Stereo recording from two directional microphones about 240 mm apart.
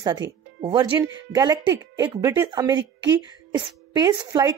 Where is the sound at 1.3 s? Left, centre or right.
Centre.